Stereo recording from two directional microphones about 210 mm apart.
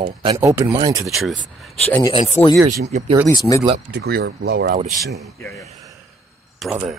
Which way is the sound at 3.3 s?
15° left (ahead or behind).